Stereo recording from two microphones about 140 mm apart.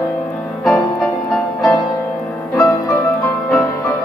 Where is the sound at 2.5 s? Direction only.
20° left (ahead or behind).